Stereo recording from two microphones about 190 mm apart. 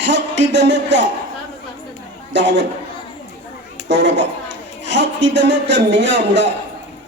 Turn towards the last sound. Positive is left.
turn(degrees=-65)  # may be behind; listen again after turning